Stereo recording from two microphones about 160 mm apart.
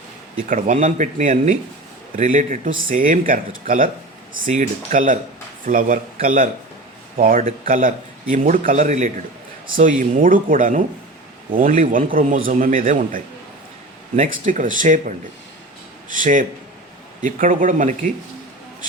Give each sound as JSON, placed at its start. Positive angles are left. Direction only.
{"t": 0.4, "sound": "a man's voice", "side_deg": -55}
{"t": 9.7, "sound": "a man's voice", "side_deg": -60}